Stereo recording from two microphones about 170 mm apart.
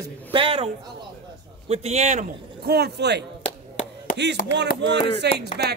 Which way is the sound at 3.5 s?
45° left (ahead or behind).